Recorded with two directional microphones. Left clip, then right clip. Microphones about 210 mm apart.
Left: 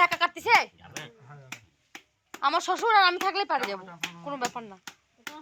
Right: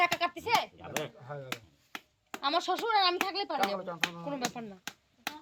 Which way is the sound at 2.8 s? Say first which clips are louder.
Left 9 dB; 30° left (ahead or behind).